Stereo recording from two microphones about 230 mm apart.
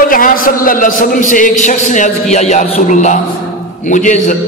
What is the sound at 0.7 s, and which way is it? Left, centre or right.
A man's voice, left.